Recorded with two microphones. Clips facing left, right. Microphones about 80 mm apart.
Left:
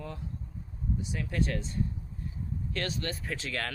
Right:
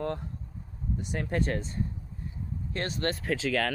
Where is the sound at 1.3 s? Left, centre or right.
Right.